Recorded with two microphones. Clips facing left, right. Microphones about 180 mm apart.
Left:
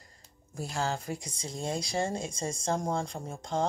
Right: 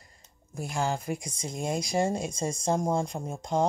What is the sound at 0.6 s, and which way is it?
Speech, 15° right (ahead or behind).